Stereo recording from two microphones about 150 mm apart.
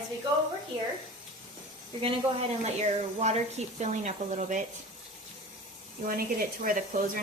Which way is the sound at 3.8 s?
50° right (ahead or behind).